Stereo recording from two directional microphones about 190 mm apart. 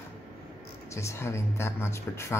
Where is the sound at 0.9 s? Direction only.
15° left (ahead or behind).